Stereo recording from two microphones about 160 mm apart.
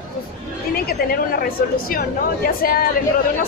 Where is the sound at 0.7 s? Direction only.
70° left (ahead or behind).